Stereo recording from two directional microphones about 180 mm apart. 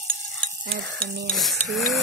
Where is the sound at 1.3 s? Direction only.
Centre (ahead or behind).